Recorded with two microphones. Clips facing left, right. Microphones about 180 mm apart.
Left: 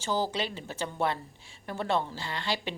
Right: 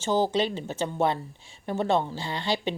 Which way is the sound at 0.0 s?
25° right (ahead or behind).